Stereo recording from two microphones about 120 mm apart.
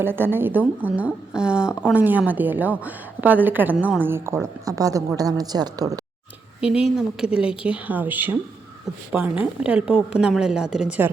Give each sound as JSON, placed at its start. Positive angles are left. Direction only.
{"t": 0.0, "sound": "a woman's voice", "side_deg": -20}
{"t": 6.6, "sound": "a woman's voice", "side_deg": -5}